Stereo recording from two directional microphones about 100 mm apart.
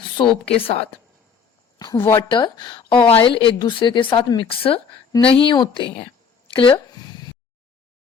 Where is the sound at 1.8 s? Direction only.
50° left (ahead or behind).